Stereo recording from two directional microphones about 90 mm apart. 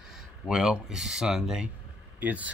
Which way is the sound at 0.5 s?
5° right (ahead or behind).